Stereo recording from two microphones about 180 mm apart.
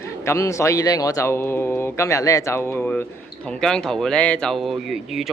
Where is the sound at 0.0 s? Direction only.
15° left (ahead or behind).